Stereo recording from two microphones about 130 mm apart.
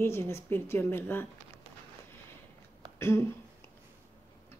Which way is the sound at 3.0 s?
20° left (ahead or behind).